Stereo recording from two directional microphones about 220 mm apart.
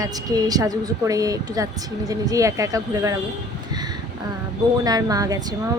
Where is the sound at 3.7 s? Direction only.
20° right (ahead or behind).